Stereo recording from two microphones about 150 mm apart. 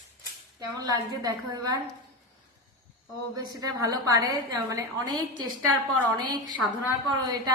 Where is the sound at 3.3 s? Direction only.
25° right (ahead or behind).